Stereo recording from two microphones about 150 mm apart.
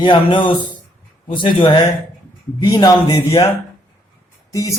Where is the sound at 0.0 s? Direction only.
35° left (ahead or behind).